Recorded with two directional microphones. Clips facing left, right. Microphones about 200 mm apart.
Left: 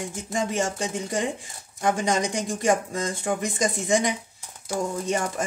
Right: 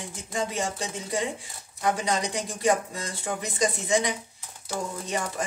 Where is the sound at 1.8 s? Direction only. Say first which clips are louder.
Left 3 dB; 45° left (ahead or behind).